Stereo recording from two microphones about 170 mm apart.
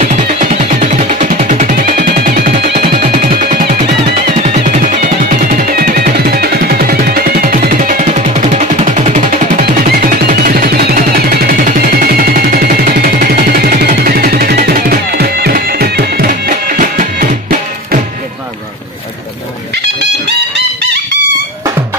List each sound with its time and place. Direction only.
0.1 s music: 50° right (ahead or behind)
9.6 s music: 60° right (ahead or behind)